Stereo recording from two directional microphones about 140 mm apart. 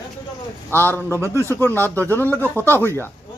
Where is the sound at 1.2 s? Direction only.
20° right (ahead or behind).